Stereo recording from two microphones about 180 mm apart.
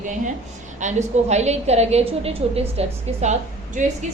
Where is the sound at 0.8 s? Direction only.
40° right (ahead or behind).